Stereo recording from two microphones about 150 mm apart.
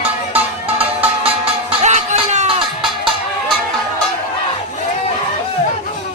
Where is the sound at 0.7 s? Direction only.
40° right (ahead or behind).